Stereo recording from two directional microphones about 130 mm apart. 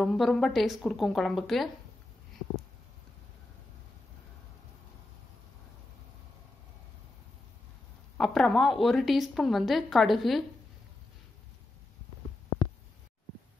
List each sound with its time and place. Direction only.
0.0 s a woman's voice: centre (ahead or behind)
8.2 s a woman's voice: centre (ahead or behind)